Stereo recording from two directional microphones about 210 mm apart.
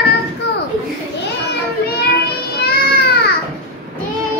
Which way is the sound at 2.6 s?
50° left (ahead or behind).